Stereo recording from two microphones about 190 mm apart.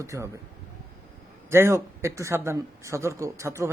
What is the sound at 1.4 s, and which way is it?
A man's voice, 15° right (ahead or behind).